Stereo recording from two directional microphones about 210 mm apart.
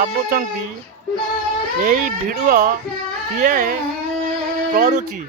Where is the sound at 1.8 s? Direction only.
40° right (ahead or behind).